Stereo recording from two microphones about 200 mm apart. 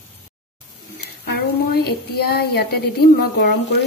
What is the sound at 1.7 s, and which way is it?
A woman's voice, 50° left (ahead or behind).